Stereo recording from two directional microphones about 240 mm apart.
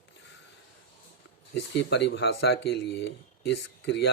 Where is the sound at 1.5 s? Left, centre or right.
Left.